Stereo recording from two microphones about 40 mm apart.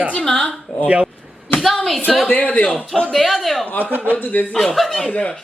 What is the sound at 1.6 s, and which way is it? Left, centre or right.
Speech, centre.